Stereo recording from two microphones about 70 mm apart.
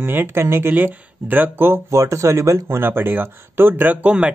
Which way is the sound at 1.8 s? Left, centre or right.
Right.